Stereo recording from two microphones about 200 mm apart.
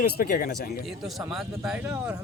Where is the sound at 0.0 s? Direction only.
50° left (ahead or behind).